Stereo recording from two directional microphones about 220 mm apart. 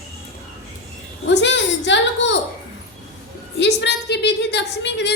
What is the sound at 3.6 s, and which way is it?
A woman's voice, 50° left (ahead or behind).